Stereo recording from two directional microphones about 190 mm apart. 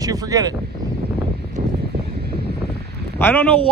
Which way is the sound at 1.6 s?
45° right (ahead or behind).